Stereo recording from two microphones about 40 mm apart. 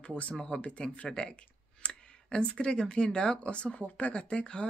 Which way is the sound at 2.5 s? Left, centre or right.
Left.